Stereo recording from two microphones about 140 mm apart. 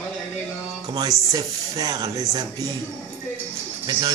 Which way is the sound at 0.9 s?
25° right (ahead or behind).